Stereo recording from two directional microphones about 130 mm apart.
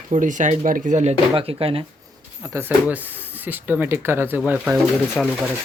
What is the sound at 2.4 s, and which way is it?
Speech, 25° right (ahead or behind).